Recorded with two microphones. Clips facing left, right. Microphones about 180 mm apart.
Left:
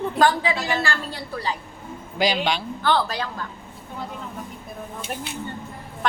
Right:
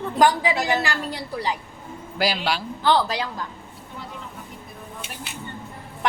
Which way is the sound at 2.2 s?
5° right (ahead or behind).